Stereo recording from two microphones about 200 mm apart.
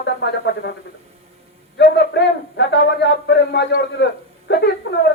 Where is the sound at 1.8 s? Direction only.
60° left (ahead or behind).